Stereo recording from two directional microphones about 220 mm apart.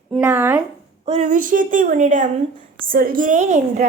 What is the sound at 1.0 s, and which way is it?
A woman's voice, 35° right (ahead or behind).